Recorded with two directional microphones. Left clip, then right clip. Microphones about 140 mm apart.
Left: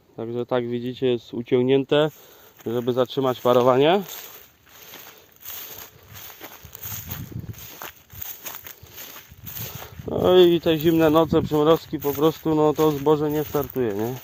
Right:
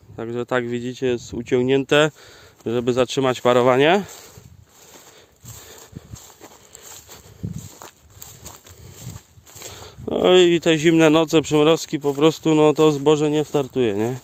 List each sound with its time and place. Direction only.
0.2 s speech: 15° right (ahead or behind)
1.9 s speech: 40° right (ahead or behind)
7.8 s walk: 10° left (ahead or behind)
10.1 s speech: 45° right (ahead or behind); by 14.2 s 80° right